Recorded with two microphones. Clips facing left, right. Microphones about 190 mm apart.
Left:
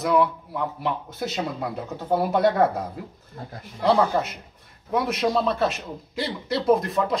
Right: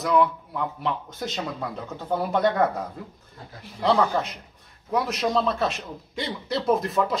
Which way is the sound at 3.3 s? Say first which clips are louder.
Left 7 dB; 50° left (ahead or behind).